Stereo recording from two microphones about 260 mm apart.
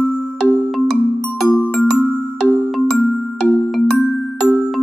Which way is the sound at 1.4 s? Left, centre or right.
Centre.